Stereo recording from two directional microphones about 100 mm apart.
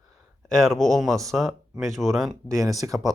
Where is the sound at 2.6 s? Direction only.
35° right (ahead or behind).